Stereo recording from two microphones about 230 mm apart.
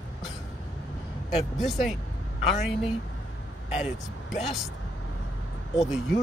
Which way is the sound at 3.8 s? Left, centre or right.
Centre.